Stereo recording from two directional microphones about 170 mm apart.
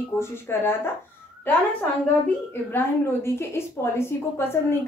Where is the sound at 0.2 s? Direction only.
15° left (ahead or behind).